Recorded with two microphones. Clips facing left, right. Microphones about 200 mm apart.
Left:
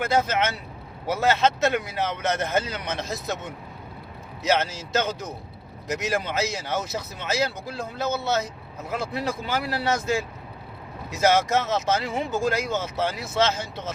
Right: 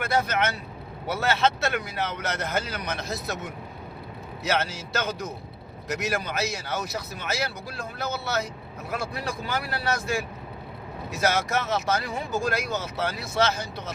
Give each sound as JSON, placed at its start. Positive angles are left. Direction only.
{"t": 0.0, "sound": "speech", "side_deg": 20}
{"t": 4.4, "sound": "speech", "side_deg": 20}